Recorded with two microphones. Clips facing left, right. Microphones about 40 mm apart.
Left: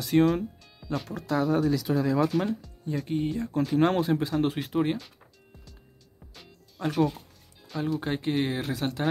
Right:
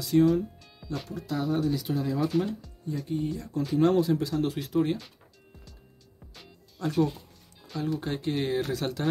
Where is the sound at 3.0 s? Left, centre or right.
Left.